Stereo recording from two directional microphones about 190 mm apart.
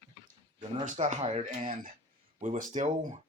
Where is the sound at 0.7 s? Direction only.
40° right (ahead or behind).